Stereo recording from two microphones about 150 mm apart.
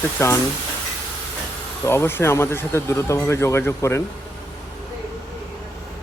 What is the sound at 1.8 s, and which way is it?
Speech, 15° left (ahead or behind).